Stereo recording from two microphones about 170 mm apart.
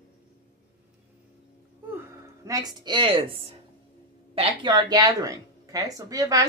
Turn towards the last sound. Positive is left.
turn(degrees=-20)  # may be behind; listen again after turning